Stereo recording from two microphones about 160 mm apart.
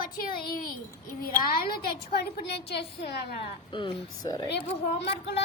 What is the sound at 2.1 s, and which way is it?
Speech, 90° left.